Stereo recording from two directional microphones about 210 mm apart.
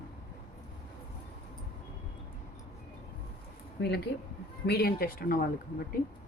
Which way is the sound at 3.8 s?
55° left (ahead or behind).